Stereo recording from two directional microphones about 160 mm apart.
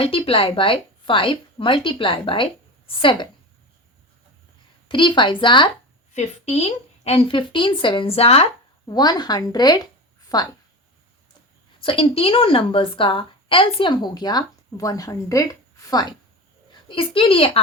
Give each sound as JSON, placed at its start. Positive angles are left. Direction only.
{"t": 0.0, "sound": "a woman's voice", "side_deg": 35}
{"t": 4.9, "sound": "a woman's voice", "side_deg": 30}
{"t": 6.1, "sound": "a woman's voice", "side_deg": 45}
{"t": 8.9, "sound": "a woman's voice", "side_deg": 25}
{"t": 11.8, "sound": "a woman's voice", "side_deg": 35}
{"t": 16.9, "sound": "a woman's voice", "side_deg": 35}